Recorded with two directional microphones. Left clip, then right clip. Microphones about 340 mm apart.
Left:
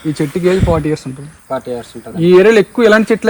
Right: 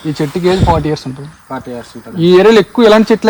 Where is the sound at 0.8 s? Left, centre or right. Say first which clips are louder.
Right 1 dB; right.